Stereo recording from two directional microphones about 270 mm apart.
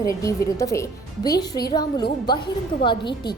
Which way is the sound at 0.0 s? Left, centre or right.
Centre.